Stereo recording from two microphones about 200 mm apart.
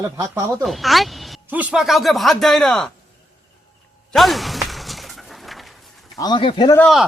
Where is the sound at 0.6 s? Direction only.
Centre (ahead or behind).